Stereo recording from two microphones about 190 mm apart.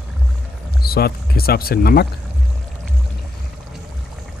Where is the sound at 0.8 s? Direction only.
55° left (ahead or behind).